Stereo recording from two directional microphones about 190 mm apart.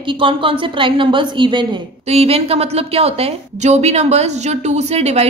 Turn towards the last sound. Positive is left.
turn(degrees=-35)  # may be behind; listen again after turning